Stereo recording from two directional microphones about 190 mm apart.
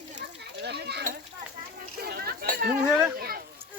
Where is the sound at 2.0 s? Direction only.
55° right (ahead or behind).